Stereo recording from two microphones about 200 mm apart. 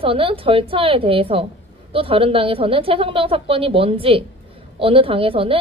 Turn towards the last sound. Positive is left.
turn(degrees=-25)  # may be behind; listen again after turning